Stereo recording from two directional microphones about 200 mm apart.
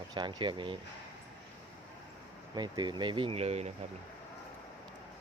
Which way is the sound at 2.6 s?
20° right (ahead or behind).